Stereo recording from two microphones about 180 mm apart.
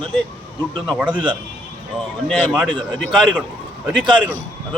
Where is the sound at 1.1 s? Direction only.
25° right (ahead or behind).